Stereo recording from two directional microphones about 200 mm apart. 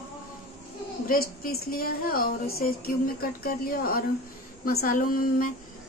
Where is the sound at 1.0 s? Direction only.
45° left (ahead or behind).